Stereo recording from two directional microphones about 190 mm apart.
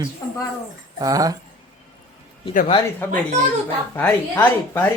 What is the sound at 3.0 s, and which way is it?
Speech, 15° left (ahead or behind).